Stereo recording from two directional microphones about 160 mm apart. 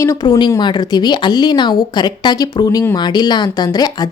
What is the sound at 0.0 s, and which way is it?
A woman's voice, 20° left (ahead or behind).